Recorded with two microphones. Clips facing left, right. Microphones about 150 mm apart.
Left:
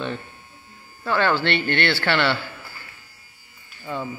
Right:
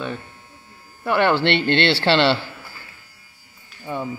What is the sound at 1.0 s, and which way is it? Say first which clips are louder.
A man's voice: right 3 dB; 20° right (ahead or behind).